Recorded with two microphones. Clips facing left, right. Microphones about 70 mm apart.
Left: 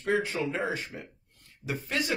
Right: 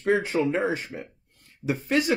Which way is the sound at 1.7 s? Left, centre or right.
Right.